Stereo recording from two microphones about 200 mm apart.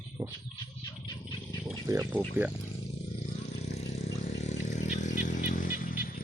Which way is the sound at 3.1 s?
30° left (ahead or behind).